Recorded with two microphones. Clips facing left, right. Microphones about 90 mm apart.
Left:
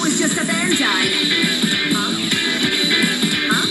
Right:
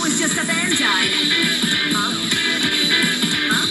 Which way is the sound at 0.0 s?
20° left (ahead or behind).